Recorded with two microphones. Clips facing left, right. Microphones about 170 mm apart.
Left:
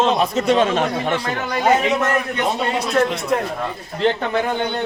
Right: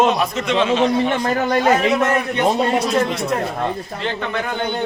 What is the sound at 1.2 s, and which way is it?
Speech, 45° right (ahead or behind).